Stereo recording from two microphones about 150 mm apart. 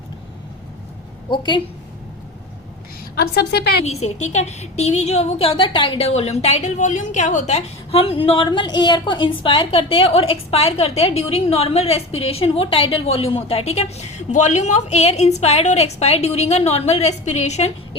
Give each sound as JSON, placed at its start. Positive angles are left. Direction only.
{"t": 1.3, "sound": "a woman's voice", "side_deg": 30}
{"t": 3.2, "sound": "a woman's voice", "side_deg": 90}
{"t": 3.8, "sound": "a woman's voice", "side_deg": 50}